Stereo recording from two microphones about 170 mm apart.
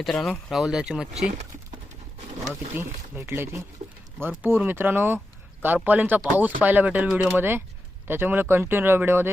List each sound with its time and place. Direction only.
0.0 s speech: centre (ahead or behind)
2.7 s speech: 15° right (ahead or behind)
3.8 s speech: 35° right (ahead or behind)
4.2 s speech: 15° right (ahead or behind)